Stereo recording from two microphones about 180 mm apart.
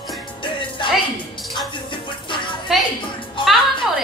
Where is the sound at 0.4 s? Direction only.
25° left (ahead or behind).